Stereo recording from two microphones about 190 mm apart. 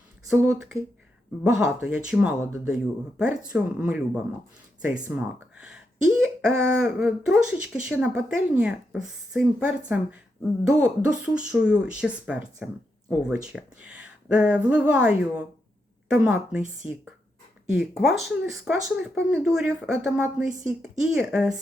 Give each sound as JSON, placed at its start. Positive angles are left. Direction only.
{"t": 0.3, "sound": "speech", "side_deg": -5}
{"t": 16.8, "sound": "speech", "side_deg": 25}
{"t": 17.7, "sound": "speech", "side_deg": 0}